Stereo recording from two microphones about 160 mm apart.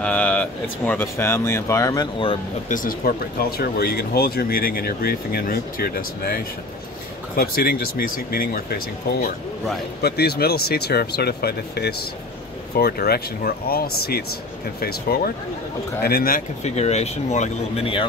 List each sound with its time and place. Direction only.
0.0 s speech: 10° left (ahead or behind); by 2.3 s 30° left (ahead or behind)
2.7 s speech: 60° left (ahead or behind)
10.0 s speech: 80° left
16.6 s speech: 45° left (ahead or behind)